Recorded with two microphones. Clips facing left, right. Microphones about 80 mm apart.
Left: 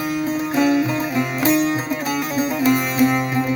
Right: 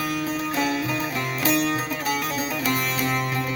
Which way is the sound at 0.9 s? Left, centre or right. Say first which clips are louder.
Left 5 dB; left.